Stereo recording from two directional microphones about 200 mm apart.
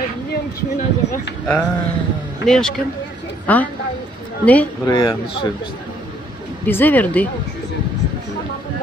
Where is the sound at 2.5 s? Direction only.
Centre (ahead or behind).